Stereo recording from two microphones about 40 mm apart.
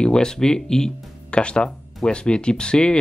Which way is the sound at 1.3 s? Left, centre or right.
Left.